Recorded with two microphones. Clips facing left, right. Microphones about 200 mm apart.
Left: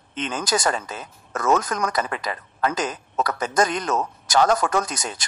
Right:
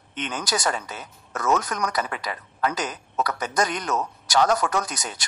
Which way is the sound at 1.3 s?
50° left (ahead or behind).